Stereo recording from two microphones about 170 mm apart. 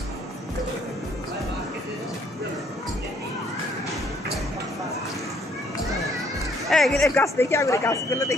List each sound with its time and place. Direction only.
6.7 s music: centre (ahead or behind)
7.2 s speech: 15° left (ahead or behind)